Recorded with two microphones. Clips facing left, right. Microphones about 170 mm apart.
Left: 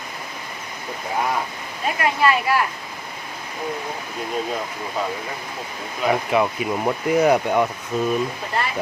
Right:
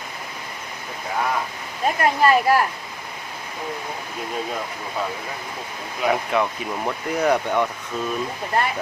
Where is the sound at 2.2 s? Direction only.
40° right (ahead or behind).